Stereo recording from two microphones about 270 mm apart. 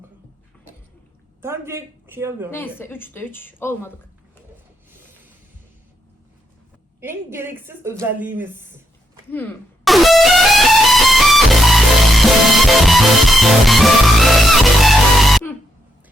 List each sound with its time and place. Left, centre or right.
1.4 s a woman's voice: centre
2.5 s a woman's voice: centre
7.0 s a woman's voice: centre
9.3 s music: centre